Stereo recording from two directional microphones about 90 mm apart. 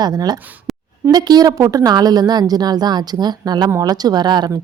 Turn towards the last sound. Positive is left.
turn(degrees=-50)  # may be behind; listen again after turning